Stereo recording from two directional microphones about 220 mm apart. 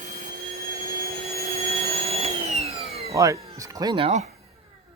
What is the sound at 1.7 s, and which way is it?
Vacuum cleaner, 30° right (ahead or behind).